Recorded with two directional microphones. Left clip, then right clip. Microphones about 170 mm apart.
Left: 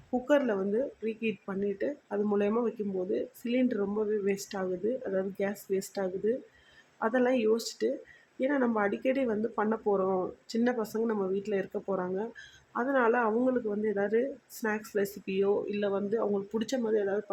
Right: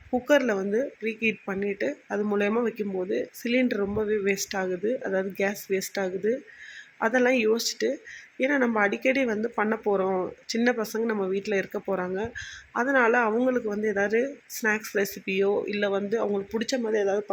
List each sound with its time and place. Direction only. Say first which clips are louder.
0.3 s speech: right 4 dB; 10° right (ahead or behind)
11.7 s speech: right 4 dB; 20° right (ahead or behind)
12.0 s speech: right 4 dB; 10° right (ahead or behind)
16.6 s speech: right 4 dB; centre (ahead or behind)